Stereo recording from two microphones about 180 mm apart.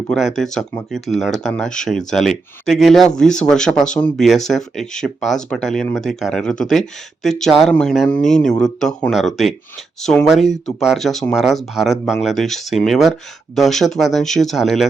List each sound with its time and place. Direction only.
0.1 s speech: centre (ahead or behind)